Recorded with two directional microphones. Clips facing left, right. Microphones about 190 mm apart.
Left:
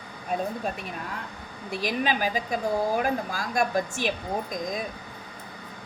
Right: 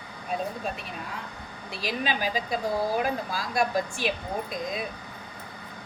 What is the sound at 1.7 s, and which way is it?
Speech, 45° left (ahead or behind).